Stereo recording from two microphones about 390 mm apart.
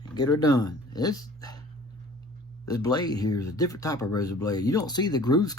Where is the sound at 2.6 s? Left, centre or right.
Centre.